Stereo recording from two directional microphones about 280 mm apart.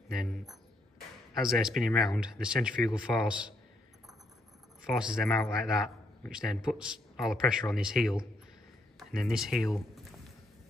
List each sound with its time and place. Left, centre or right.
0.1 s a man's voice: centre
4.9 s a man's voice: centre
9.1 s a man's voice: centre